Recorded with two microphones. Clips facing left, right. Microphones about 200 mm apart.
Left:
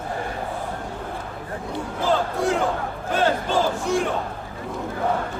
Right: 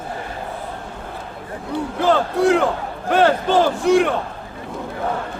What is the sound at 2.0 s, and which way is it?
Battle cry, 70° right (ahead or behind).